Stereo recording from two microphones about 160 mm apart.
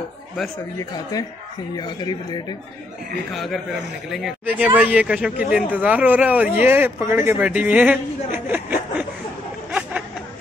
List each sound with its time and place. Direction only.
1.8 s speech: 25° left (ahead or behind)
3.3 s a man's voice: centre (ahead or behind)
9.7 s a sound: 5° right (ahead or behind)